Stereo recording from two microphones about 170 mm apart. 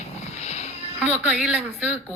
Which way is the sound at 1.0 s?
5° right (ahead or behind).